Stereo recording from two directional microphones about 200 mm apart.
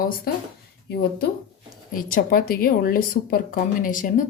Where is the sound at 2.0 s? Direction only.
45° left (ahead or behind).